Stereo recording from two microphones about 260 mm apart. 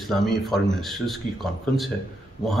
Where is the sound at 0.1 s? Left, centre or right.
Centre.